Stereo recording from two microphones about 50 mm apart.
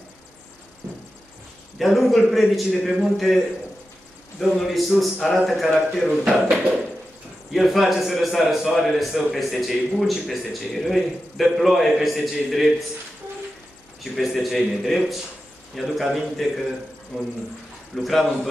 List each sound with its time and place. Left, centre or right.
1.8 s a man's voice: centre
4.5 s a man's voice: centre
6.5 s a sound: centre
7.5 s a man's voice: centre
14.1 s a man's voice: centre
17.9 s a man's voice: centre